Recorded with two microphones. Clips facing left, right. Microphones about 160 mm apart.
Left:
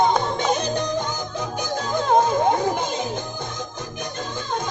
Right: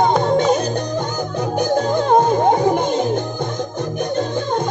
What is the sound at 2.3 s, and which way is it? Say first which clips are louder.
Music: right 5 dB; 50° right (ahead or behind).